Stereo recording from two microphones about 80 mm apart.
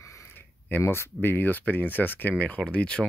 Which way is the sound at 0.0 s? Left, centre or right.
Left.